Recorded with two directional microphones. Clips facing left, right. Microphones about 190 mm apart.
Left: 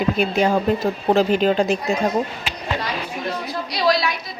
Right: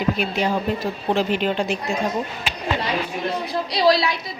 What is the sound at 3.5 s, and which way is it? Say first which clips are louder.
Speech: right 2 dB; 30° right (ahead or behind).